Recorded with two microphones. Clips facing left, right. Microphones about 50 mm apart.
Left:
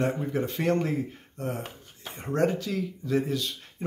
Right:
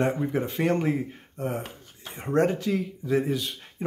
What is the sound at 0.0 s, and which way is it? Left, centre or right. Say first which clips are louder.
Speech: right 2 dB; centre.